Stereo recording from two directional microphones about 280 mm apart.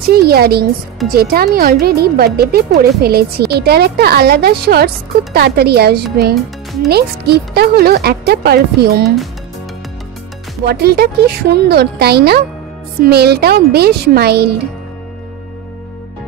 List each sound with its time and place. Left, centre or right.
0.1 s a woman's voice: right
10.6 s a woman's voice: right